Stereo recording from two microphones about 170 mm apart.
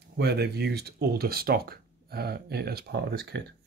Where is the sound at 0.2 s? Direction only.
75° right (ahead or behind).